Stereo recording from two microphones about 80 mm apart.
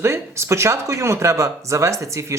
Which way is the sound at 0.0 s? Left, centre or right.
Right.